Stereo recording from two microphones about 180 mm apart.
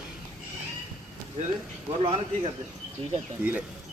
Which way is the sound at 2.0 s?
30° right (ahead or behind).